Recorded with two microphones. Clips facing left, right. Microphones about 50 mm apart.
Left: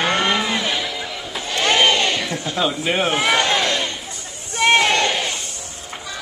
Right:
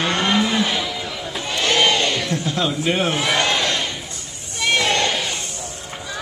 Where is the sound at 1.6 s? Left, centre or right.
Left.